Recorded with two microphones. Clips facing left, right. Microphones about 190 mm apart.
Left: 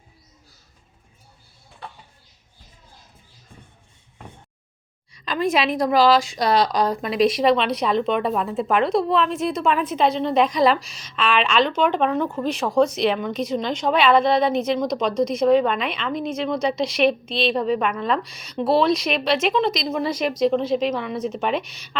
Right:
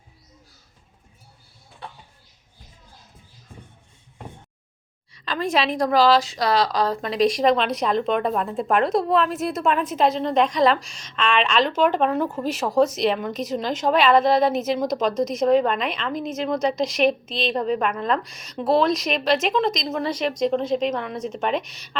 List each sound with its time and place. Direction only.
5.1 s a woman's voice: 15° left (ahead or behind)
7.4 s a woman's voice: centre (ahead or behind)